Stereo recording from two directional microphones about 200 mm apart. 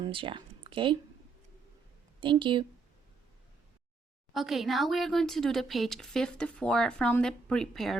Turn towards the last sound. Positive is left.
turn(degrees=0)  # may be behind; listen again after turning